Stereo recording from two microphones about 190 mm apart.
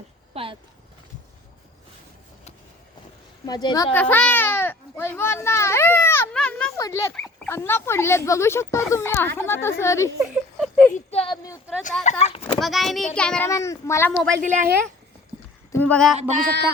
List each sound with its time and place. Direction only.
0.4 s speech: 30° right (ahead or behind)
3.4 s a woman's voice: 20° left (ahead or behind)
3.9 s a child's voice: 10° left (ahead or behind)
6.7 s speech: 15° left (ahead or behind)
10.2 s a sound: 5° right (ahead or behind)
10.9 s speech: 30° left (ahead or behind)
12.5 s a child's voice: centre (ahead or behind)
13.5 s speech: 15° left (ahead or behind)
14.4 s a woman's voice: 40° right (ahead or behind)
15.7 s speech: 10° left (ahead or behind)
16.5 s a sound: 60° right (ahead or behind)